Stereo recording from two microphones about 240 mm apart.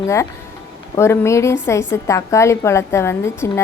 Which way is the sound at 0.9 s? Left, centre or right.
Centre.